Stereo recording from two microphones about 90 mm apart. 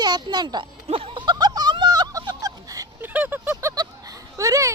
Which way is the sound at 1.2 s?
50° right (ahead or behind).